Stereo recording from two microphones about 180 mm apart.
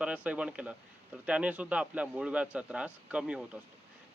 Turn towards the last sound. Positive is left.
turn(degrees=-5)  # may be behind; listen again after turning